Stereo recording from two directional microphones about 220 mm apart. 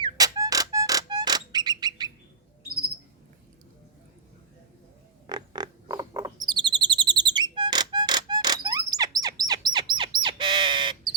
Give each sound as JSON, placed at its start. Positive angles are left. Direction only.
{"t": 0.0, "sound": "music", "side_deg": -15}
{"t": 5.2, "sound": "bird", "side_deg": -20}